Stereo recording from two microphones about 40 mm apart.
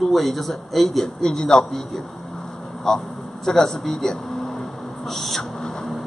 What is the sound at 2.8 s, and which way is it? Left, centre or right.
Vehicle, centre.